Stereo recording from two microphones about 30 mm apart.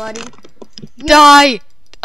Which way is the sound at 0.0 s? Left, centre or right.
Centre.